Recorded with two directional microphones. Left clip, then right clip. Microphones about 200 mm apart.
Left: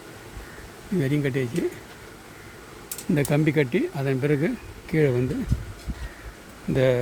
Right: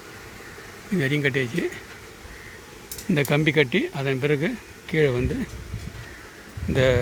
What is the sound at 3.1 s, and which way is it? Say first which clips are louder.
Speech: right 2 dB; 5° left (ahead or behind).